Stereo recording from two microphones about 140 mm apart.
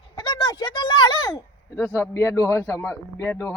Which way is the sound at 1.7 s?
15° left (ahead or behind).